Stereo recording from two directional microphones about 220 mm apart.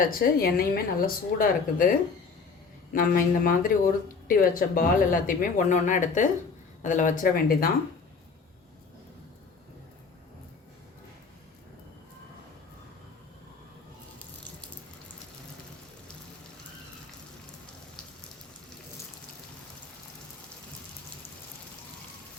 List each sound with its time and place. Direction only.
0.0 s speech: 40° left (ahead or behind)
2.9 s speech: 40° left (ahead or behind)